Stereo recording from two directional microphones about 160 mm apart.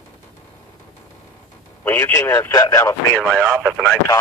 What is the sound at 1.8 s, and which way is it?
Speech, 15° left (ahead or behind).